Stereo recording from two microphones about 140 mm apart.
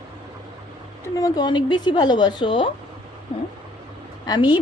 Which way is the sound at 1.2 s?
30° left (ahead or behind).